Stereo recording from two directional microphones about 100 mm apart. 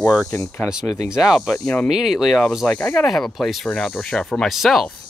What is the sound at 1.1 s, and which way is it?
Speech, 5° right (ahead or behind).